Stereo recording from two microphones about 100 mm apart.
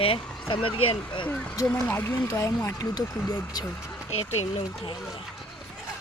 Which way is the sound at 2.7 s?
40° left (ahead or behind).